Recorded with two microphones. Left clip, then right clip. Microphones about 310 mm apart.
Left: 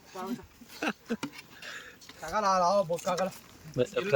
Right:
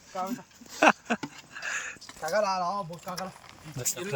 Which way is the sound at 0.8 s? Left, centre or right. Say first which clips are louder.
Right 12 dB; centre.